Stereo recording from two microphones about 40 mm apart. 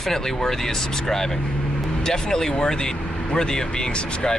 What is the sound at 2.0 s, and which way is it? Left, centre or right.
Speech, centre.